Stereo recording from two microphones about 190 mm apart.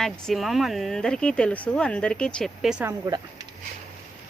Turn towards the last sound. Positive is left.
turn(degrees=-20)  # may be behind; listen again after turning